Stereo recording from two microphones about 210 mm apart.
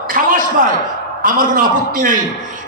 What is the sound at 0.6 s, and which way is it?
A man's voice, 40° right (ahead or behind).